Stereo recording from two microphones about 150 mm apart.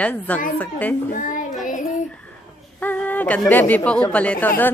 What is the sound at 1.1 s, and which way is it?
Child singing, 60° left (ahead or behind).